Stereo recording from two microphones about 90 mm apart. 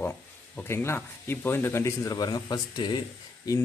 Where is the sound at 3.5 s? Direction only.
40° left (ahead or behind).